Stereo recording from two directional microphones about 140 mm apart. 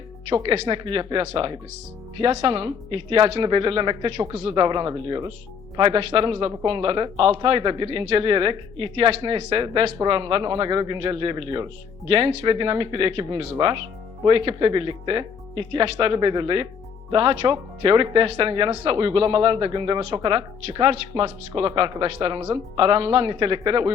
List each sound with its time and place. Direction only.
0.3 s speech: 35° right (ahead or behind)